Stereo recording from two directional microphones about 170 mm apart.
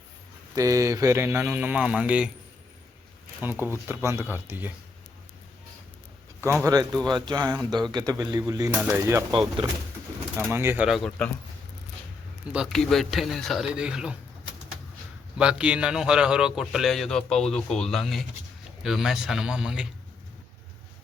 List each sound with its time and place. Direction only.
0.5 s speech: 20° right (ahead or behind)
3.7 s speech: 15° right (ahead or behind)
6.4 s speech: 15° right (ahead or behind)
9.3 s speech: 30° right (ahead or behind)
10.5 s speech: 15° right (ahead or behind)
10.8 s a man's voice: centre (ahead or behind)
12.5 s a man's voice: centre (ahead or behind)
15.4 s a man's voice: 5° right (ahead or behind)